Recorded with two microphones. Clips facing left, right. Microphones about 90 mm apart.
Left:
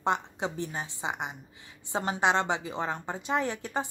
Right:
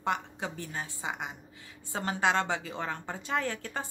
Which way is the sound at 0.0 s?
25° left (ahead or behind).